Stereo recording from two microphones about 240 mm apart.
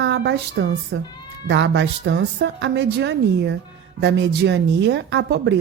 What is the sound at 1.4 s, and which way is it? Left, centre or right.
Speech, right.